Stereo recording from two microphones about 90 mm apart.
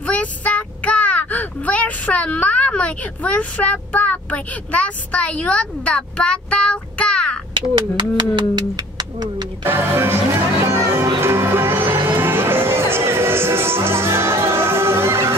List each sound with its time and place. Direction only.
0.0 s speech: 15° left (ahead or behind)
7.5 s bird: 60° right (ahead or behind)
9.7 s music: 25° right (ahead or behind)